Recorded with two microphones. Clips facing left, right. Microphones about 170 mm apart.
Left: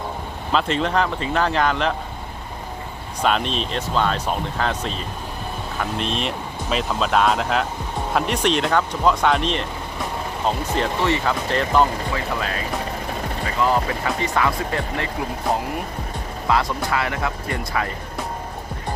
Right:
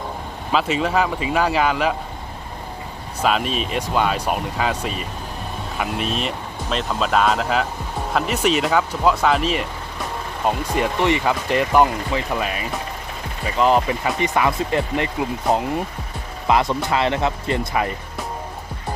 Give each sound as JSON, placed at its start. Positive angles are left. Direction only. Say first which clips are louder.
{"t": 0.5, "sound": "speech", "louder": "right 1 dB", "side_deg": -5}
{"t": 3.2, "sound": "speech", "louder": "right 1 dB", "side_deg": -5}
{"t": 13.6, "sound": "speech", "louder": "right 4 dB", "side_deg": -20}